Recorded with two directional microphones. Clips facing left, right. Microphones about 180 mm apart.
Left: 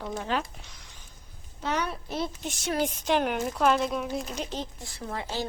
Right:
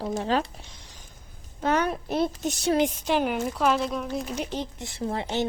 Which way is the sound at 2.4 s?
35° right (ahead or behind).